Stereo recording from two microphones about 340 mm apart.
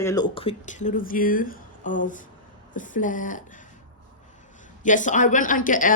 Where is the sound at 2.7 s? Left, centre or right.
Left.